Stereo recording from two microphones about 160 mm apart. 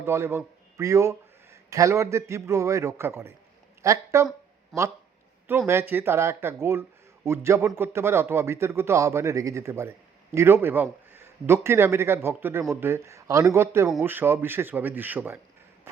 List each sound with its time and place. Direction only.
0.0 s speech: 15° right (ahead or behind)
4.7 s speech: centre (ahead or behind)
5.5 s speech: 15° right (ahead or behind)